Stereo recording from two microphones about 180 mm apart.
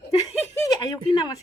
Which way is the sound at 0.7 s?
20° left (ahead or behind).